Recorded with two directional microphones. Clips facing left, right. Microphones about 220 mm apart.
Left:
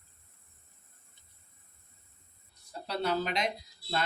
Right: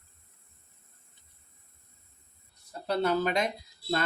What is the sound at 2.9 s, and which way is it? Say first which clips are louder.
Speech: right 5 dB; 50° right (ahead or behind).